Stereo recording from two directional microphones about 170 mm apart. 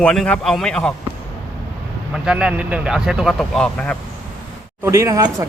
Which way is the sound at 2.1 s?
5° right (ahead or behind).